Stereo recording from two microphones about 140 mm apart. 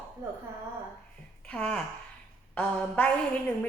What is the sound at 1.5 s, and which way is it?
A woman's voice, 10° left (ahead or behind).